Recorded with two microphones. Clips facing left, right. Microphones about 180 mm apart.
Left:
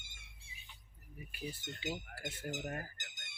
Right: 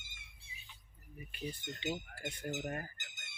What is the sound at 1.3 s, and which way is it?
Speech, 5° left (ahead or behind).